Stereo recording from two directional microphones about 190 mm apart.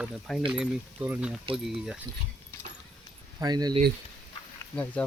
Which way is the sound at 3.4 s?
20° right (ahead or behind).